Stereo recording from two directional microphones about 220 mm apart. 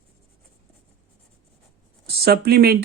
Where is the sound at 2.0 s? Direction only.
45° right (ahead or behind).